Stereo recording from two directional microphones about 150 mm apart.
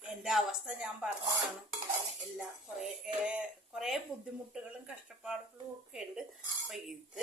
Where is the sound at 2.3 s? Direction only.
5° right (ahead or behind).